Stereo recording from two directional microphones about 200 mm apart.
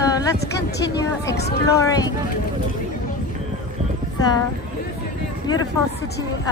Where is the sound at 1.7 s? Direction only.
15° left (ahead or behind).